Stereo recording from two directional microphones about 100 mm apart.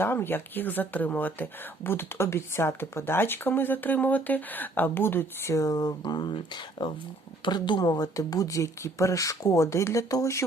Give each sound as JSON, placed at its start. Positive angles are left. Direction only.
{"t": 0.0, "sound": "speech", "side_deg": 20}